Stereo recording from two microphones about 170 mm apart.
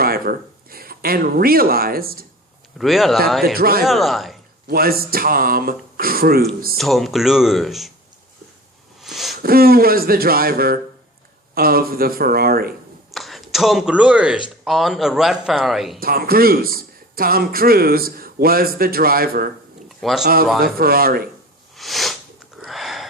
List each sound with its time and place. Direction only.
0.0 s speech: 60° right (ahead or behind)
2.7 s speech: centre (ahead or behind)
3.4 s a man's voice: 60° right (ahead or behind)
3.8 s speech: centre (ahead or behind)
4.7 s a man's voice: 60° right (ahead or behind)
6.7 s speech: centre (ahead or behind)
9.0 s a sound: centre (ahead or behind)
9.4 s a man's voice: 60° right (ahead or behind)
13.1 s speech: centre (ahead or behind)
16.0 s a man's voice: 60° right (ahead or behind)
20.0 s speech: centre (ahead or behind)
20.2 s a man's voice: 60° right (ahead or behind)
21.8 s sniff: centre (ahead or behind)
22.6 s a sound: centre (ahead or behind)